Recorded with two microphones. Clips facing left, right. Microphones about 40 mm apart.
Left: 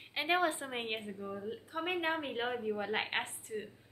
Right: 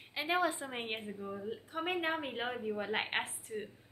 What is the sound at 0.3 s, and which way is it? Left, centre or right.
Speech, left.